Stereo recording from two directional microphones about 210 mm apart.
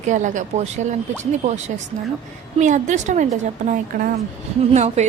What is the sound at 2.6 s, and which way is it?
Speech, 35° right (ahead or behind).